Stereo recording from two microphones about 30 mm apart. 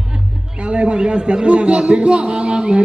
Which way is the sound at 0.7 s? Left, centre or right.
Right.